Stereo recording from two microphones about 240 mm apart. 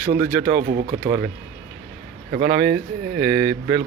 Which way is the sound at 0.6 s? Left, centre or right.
Right.